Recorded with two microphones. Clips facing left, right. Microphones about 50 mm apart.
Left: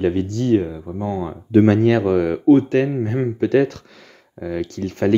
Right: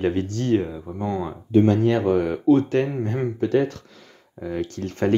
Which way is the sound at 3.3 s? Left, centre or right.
Left.